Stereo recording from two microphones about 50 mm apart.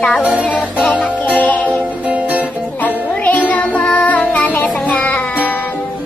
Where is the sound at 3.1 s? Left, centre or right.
Left.